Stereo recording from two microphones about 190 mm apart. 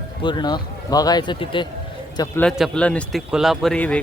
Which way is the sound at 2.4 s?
Centre (ahead or behind).